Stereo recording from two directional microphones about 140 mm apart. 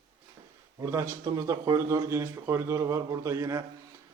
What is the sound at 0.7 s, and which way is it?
Speech, 20° right (ahead or behind).